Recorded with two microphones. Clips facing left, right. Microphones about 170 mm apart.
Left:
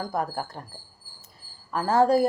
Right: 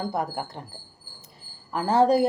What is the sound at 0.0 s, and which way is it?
Speech, 20° right (ahead or behind).